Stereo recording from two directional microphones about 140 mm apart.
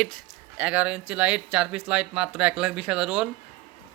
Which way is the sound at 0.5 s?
10° right (ahead or behind).